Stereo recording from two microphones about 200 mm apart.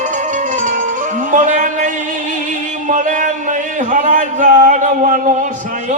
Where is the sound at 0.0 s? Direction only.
40° right (ahead or behind).